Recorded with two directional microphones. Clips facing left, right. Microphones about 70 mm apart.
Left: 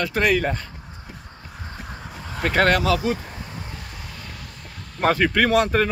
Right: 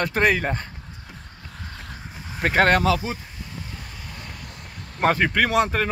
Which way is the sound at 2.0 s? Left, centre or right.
Left.